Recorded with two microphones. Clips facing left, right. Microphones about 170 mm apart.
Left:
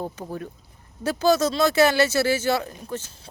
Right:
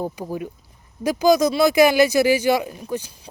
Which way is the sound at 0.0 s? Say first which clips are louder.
Right 4 dB; 10° right (ahead or behind).